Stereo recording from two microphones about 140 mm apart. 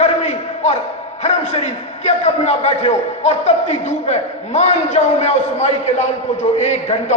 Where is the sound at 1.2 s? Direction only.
55° left (ahead or behind).